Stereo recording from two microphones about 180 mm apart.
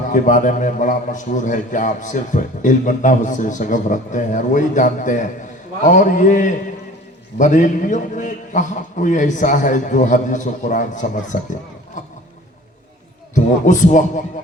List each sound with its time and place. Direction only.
0.1 s a man's voice: 45° left (ahead or behind)
12.0 s boat: 45° left (ahead or behind)
13.3 s a man's voice: 45° left (ahead or behind)